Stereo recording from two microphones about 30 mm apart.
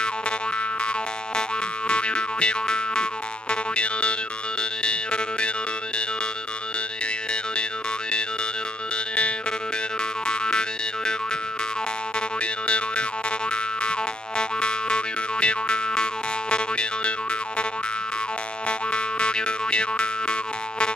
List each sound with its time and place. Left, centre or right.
1.9 s boing: left
10.2 s boing: left
12.6 s boing: left
18.7 s boing: left